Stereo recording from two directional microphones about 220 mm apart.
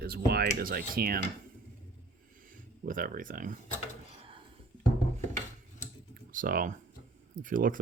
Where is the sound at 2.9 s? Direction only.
40° right (ahead or behind).